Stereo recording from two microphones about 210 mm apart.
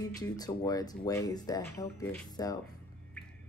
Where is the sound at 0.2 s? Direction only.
20° left (ahead or behind).